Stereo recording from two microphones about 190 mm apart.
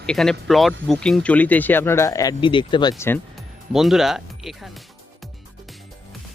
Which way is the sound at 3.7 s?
Centre (ahead or behind).